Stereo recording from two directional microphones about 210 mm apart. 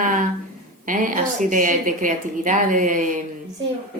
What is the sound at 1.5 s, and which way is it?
Speech, 40° right (ahead or behind).